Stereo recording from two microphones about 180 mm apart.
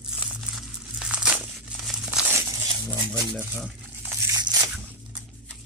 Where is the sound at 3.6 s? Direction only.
15° right (ahead or behind).